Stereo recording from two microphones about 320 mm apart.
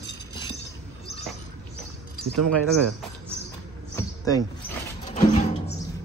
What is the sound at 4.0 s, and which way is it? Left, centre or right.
Music, centre.